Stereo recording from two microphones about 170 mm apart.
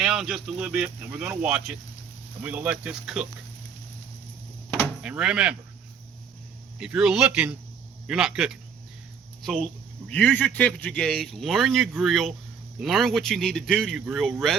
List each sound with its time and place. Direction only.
0.0 s a sound: 5° right (ahead or behind)
0.4 s speech: 5° right (ahead or behind)
5.0 s speech: 5° right (ahead or behind)
6.7 s speech: 5° right (ahead or behind)